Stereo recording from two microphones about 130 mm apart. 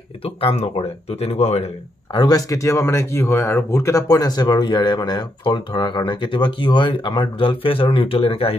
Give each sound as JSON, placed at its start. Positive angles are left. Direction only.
{"t": 0.2, "sound": "speech", "side_deg": 45}
{"t": 2.1, "sound": "speech", "side_deg": 30}